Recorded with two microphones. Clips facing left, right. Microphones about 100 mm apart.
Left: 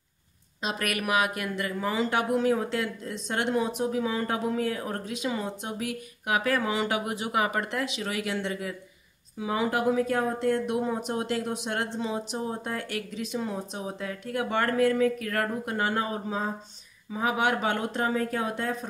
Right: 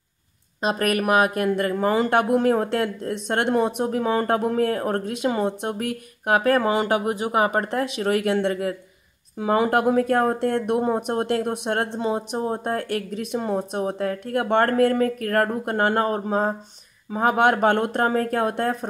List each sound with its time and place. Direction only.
0.6 s speech: 45° right (ahead or behind)